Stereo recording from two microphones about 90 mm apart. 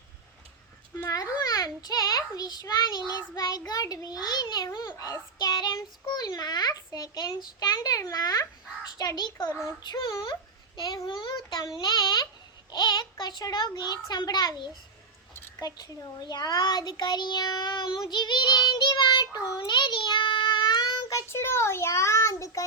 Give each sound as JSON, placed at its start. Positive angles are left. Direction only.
{"t": 0.9, "sound": "babbling", "side_deg": 35}
{"t": 1.5, "sound": "a child's voice", "side_deg": 40}
{"t": 10.1, "sound": "speech", "side_deg": 40}
{"t": 10.8, "sound": "a child's voice", "side_deg": 50}
{"t": 19.5, "sound": "child singing", "side_deg": 60}